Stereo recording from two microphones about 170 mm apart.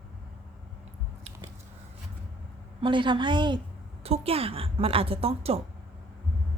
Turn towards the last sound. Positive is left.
turn(degrees=-35)  # may be behind; listen again after turning